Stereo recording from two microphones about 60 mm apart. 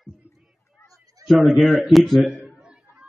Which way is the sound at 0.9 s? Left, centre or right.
Right.